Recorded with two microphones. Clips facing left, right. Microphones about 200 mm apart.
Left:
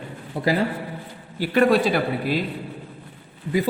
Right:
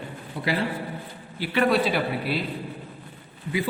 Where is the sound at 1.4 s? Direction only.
45° left (ahead or behind).